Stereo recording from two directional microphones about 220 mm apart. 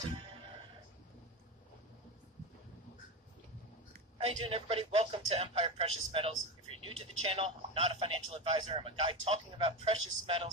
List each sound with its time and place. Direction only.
4.5 s a man's voice: 25° right (ahead or behind)